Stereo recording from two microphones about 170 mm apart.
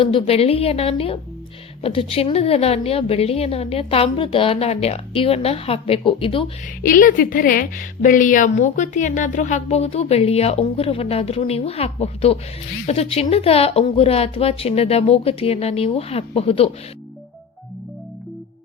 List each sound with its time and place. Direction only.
0.0 s a woman's voice: 30° left (ahead or behind)
6.8 s a woman's voice: 55° left (ahead or behind); by 16.6 s 35° left (ahead or behind)